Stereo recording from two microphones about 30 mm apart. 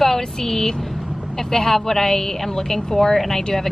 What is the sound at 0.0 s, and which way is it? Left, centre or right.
Speech, centre.